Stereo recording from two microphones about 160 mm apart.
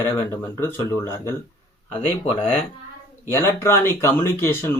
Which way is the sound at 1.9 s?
35° left (ahead or behind).